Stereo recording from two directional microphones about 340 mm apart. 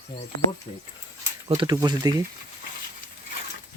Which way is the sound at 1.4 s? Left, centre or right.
Centre.